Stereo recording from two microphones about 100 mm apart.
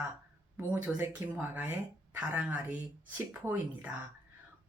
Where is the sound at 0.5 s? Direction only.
15° right (ahead or behind).